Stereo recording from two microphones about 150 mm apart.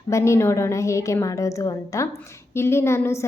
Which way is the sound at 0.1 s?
20° left (ahead or behind).